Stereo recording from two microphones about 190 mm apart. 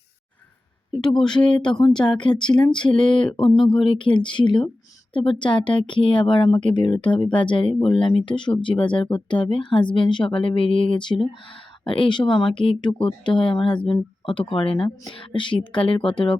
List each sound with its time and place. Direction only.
1.0 s speech: 5° left (ahead or behind)
2.1 s speech: 25° left (ahead or behind)
3.4 s speech: centre (ahead or behind)
3.8 s speech: 25° left (ahead or behind)